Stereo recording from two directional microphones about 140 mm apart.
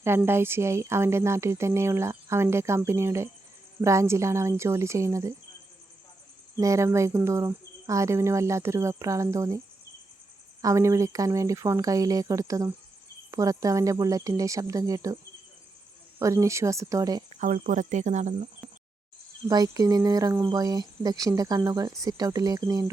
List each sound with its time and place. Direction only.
0.2 s speech: 15° right (ahead or behind)
6.6 s speech: 20° right (ahead or behind)
10.6 s speech: 20° right (ahead or behind)
16.2 s speech: 20° right (ahead or behind)
17.4 s speech: 65° right (ahead or behind)
19.5 s speech: 25° right (ahead or behind)